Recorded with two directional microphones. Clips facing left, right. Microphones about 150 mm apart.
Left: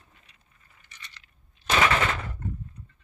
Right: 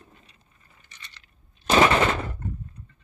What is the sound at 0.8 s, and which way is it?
Coin, 30° right (ahead or behind).